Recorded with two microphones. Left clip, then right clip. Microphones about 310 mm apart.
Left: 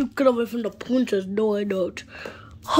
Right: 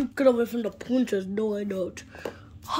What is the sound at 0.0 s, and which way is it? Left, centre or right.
Speech, centre.